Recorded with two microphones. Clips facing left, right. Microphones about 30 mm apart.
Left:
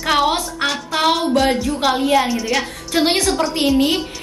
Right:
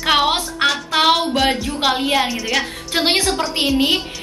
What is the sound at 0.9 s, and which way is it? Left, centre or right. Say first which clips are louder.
A woman's voice: left 1 dB; centre.